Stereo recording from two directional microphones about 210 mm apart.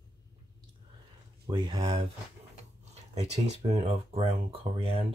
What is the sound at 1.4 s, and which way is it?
Speech, 20° right (ahead or behind).